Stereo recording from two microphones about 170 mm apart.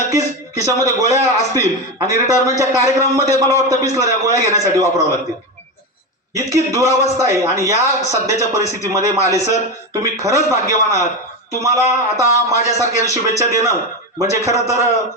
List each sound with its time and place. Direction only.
0.1 s a man's voice: 20° right (ahead or behind)
6.3 s a man's voice: 20° right (ahead or behind)